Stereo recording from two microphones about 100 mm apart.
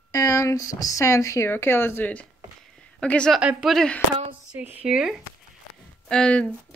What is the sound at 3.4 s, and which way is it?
Speech, 10° right (ahead or behind).